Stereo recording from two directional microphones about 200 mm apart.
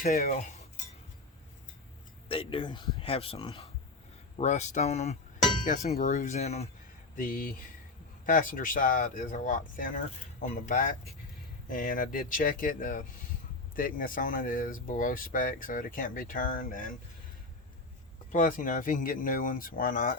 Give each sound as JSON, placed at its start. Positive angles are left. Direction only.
{"t": 0.2, "sound": "cutlery", "side_deg": 35}
{"t": 2.3, "sound": "speech", "side_deg": 25}
{"t": 7.2, "sound": "speech", "side_deg": 45}
{"t": 18.3, "sound": "speech", "side_deg": 40}